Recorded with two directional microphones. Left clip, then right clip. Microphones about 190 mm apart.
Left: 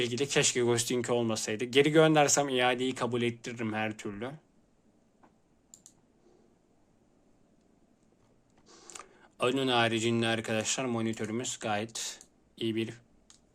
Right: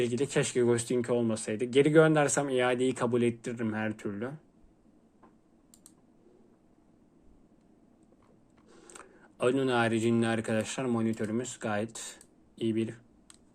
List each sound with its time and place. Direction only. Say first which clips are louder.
0.0 s speech: left 1 dB; 15° left (ahead or behind)
8.6 s speech: left 2 dB; 15° left (ahead or behind)